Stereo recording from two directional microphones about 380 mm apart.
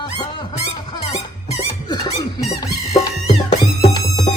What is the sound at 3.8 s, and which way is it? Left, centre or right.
Music, centre.